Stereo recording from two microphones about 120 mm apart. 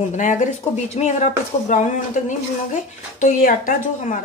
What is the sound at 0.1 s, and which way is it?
Speech, 90° left.